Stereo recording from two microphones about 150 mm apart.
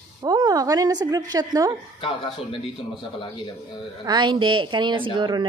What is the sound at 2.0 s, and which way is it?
A man's voice, 35° left (ahead or behind).